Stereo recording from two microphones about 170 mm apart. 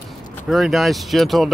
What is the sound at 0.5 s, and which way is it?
Speech, centre (ahead or behind).